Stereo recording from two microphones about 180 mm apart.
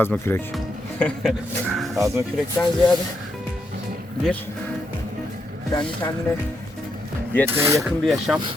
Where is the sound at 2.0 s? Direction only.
15° right (ahead or behind).